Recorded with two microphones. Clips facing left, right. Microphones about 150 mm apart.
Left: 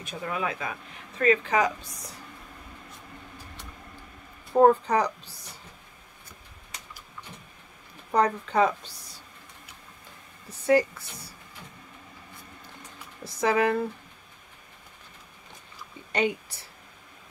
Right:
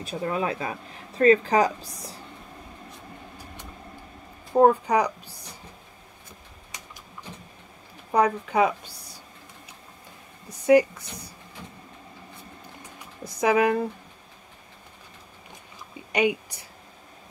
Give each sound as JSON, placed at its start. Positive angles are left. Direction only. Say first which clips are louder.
{"t": 0.0, "sound": "speech", "louder": "right 4 dB", "side_deg": -35}
{"t": 4.6, "sound": "speech", "louder": "right 1 dB", "side_deg": -10}
{"t": 8.1, "sound": "speech", "louder": "right 2 dB", "side_deg": -10}
{"t": 10.5, "sound": "speech", "louder": "right 4 dB", "side_deg": -15}
{"t": 13.2, "sound": "speech", "louder": "right 3 dB", "side_deg": -15}
{"t": 16.1, "sound": "speech", "louder": "right 3 dB", "side_deg": -10}